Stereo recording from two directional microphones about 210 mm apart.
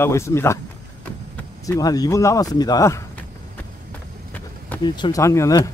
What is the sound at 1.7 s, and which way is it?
Speech, 15° left (ahead or behind).